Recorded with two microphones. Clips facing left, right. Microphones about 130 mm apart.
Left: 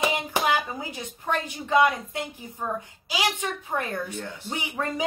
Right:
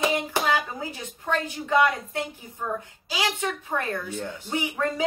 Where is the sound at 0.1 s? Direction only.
15° left (ahead or behind).